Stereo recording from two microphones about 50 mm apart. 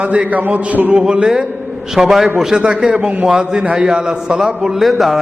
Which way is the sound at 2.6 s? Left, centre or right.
Centre.